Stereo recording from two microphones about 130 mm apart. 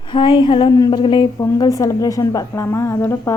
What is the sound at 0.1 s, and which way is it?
Speech, 40° left (ahead or behind).